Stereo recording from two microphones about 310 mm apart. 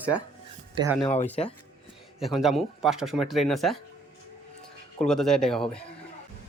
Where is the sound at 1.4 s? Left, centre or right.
Centre.